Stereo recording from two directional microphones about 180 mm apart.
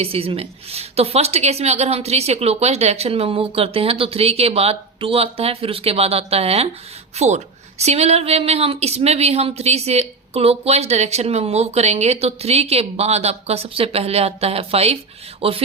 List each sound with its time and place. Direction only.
0.0 s a woman's voice: 30° right (ahead or behind)